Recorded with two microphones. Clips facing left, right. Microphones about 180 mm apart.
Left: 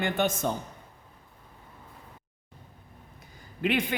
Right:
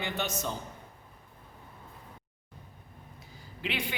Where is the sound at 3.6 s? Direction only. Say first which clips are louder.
Left 8 dB; 50° left (ahead or behind).